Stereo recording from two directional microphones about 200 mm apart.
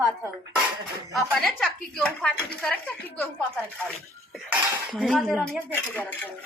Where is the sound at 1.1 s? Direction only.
Centre (ahead or behind).